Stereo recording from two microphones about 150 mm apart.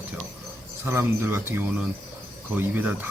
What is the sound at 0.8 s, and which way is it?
Speech, 15° right (ahead or behind).